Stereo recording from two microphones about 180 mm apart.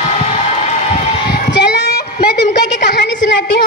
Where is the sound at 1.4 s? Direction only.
70° left (ahead or behind).